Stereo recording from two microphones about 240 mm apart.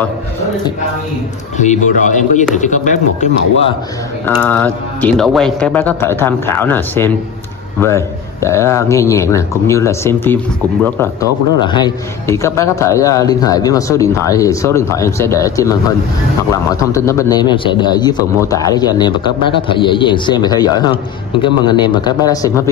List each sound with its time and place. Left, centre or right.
1.6 s speech: left
4.3 s a man's voice: centre
16.9 s a man's voice: centre